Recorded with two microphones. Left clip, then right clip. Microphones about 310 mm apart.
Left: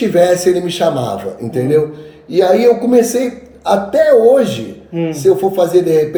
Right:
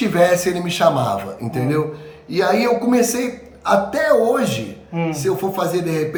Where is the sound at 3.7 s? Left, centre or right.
Centre.